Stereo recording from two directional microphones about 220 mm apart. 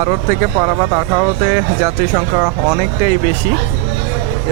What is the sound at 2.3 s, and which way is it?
Speech, 25° right (ahead or behind).